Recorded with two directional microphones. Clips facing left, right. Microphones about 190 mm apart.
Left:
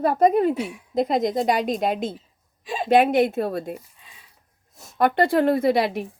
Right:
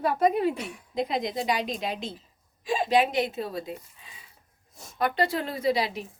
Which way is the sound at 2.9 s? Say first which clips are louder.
Left 8 dB; 55° left (ahead or behind).